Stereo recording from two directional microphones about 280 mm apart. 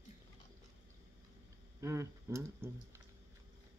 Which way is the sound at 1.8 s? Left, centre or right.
Centre.